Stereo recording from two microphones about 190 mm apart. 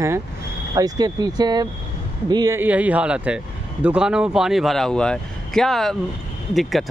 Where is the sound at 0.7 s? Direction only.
20° right (ahead or behind).